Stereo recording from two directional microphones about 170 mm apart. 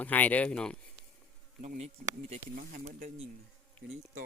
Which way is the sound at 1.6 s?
45° right (ahead or behind).